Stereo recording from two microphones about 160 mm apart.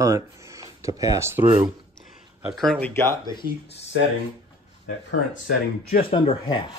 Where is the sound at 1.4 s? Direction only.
30° right (ahead or behind).